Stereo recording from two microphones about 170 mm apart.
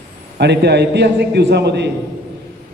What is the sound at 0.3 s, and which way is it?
A man's voice, 80° right.